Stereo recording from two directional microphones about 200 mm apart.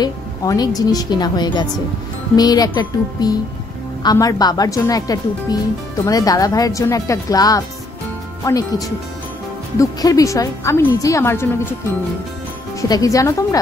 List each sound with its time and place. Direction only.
0.0 s a woman's voice: 20° left (ahead or behind)
12.8 s speech: 20° left (ahead or behind)